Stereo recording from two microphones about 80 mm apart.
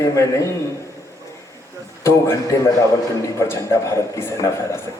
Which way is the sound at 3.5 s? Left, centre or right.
Left.